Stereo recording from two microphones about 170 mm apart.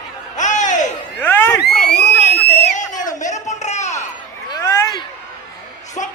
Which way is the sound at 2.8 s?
50° left (ahead or behind).